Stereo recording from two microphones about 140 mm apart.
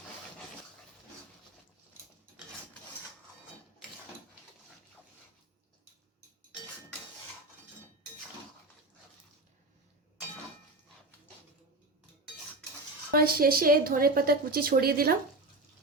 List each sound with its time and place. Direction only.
13.1 s speech: 90° right